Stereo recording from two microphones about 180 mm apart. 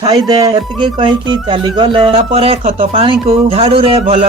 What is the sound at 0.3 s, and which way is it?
Speech, 20° right (ahead or behind).